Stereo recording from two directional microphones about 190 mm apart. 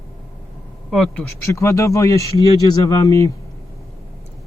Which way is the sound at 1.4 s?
15° left (ahead or behind).